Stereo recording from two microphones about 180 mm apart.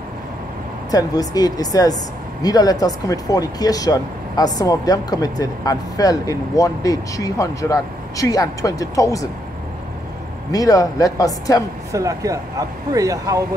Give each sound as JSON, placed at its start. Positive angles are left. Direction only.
{"t": 0.9, "sound": "speech", "side_deg": 20}
{"t": 10.5, "sound": "speech", "side_deg": 20}
{"t": 11.9, "sound": "speech", "side_deg": -20}